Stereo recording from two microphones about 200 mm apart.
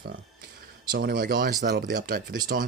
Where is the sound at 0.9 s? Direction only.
50° right (ahead or behind).